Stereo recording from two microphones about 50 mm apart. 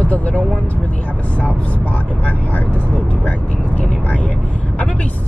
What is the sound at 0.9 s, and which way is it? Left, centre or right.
Speech, left.